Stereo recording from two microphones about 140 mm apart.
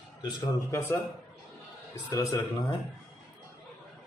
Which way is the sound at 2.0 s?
30° left (ahead or behind).